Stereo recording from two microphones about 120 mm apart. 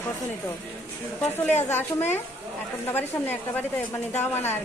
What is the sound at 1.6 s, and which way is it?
A woman's voice, 15° left (ahead or behind).